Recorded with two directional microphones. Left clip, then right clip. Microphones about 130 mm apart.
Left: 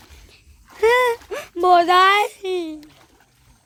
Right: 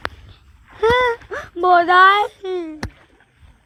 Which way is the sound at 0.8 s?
35° left (ahead or behind).